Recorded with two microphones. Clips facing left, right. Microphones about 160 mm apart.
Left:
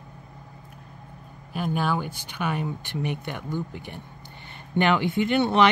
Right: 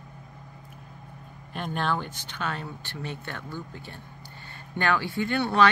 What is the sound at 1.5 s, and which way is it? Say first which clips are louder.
Speech: left 3 dB; 5° left (ahead or behind).